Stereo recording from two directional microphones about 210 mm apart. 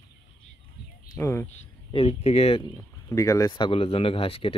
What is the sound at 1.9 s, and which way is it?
Speech, 30° left (ahead or behind).